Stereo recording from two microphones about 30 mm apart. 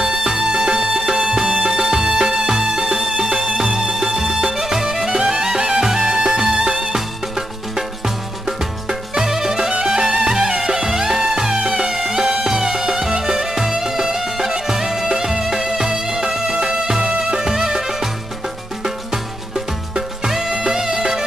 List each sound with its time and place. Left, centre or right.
0.0 s music: right
5.1 s music: right
9.1 s music: centre
20.2 s music: centre